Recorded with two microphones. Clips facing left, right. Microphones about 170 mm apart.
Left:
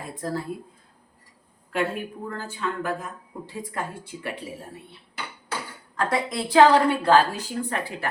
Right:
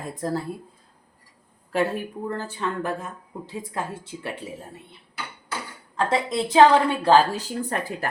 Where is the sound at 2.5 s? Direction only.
35° right (ahead or behind).